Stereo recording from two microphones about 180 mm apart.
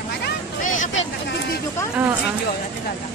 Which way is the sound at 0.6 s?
45° left (ahead or behind).